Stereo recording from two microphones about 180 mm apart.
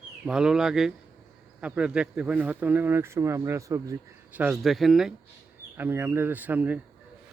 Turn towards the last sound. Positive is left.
turn(degrees=-10)  # may be behind; listen again after turning